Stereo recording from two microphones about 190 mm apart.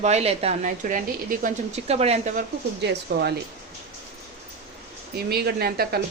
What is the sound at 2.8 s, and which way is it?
Speech, 60° right (ahead or behind).